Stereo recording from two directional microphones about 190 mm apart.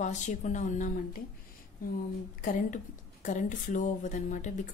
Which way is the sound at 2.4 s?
40° left (ahead or behind).